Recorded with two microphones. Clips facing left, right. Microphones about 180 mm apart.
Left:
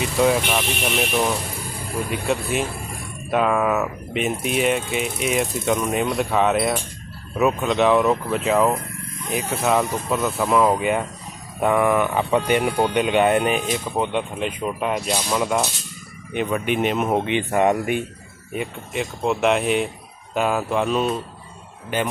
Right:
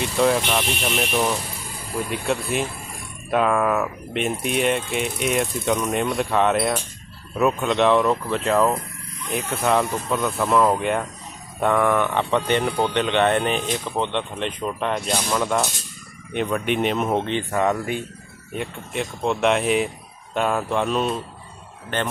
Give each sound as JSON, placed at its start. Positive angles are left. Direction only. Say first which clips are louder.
{"t": 0.0, "sound": "speech", "louder": "left 1 dB", "side_deg": 0}
{"t": 17.2, "sound": "speech", "louder": "left 3 dB", "side_deg": 15}
{"t": 18.5, "sound": "speech", "louder": "left 1 dB", "side_deg": 0}